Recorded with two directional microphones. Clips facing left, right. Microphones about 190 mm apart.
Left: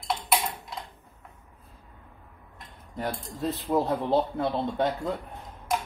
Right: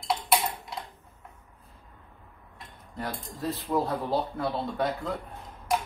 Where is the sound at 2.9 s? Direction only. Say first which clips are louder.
Left 3 dB; 20° left (ahead or behind).